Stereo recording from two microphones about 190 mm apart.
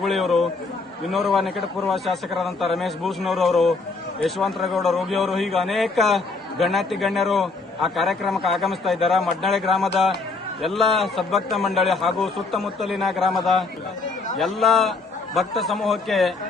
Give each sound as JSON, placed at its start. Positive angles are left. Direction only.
{"t": 0.0, "sound": "a man's voice", "side_deg": 0}